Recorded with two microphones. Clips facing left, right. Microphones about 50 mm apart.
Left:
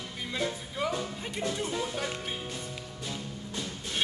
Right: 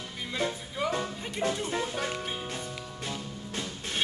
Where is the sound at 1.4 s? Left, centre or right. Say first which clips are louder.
Right 4 dB; right.